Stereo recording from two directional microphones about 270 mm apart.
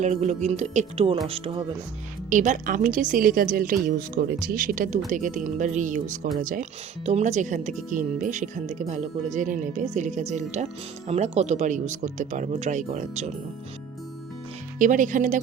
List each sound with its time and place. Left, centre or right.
0.0 s speech: right
14.8 s speech: right